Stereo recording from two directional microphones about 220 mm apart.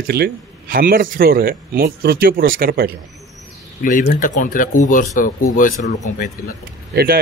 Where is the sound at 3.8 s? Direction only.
40° left (ahead or behind).